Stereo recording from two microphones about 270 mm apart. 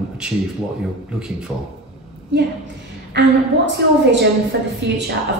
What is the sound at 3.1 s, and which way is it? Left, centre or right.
A woman's voice, right.